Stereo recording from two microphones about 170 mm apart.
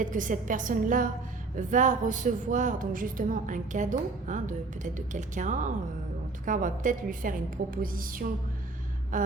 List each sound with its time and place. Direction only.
0.0 s a woman's voice: 50° right (ahead or behind)
7.8 s music: 55° right (ahead or behind)
9.1 s a woman's voice: 50° right (ahead or behind)